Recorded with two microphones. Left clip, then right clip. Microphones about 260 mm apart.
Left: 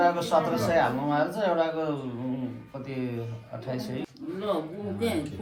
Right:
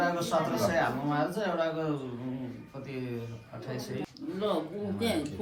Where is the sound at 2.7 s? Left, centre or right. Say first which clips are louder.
Left 4 dB; left.